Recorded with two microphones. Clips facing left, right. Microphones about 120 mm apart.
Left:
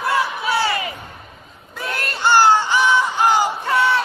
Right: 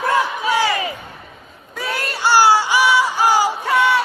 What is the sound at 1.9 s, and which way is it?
Crowd, 10° right (ahead or behind).